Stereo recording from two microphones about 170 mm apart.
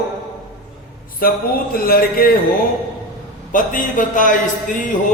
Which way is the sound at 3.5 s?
50° left (ahead or behind).